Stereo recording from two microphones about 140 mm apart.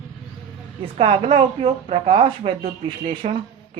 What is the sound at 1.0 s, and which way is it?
A woman's voice, 40° right (ahead or behind).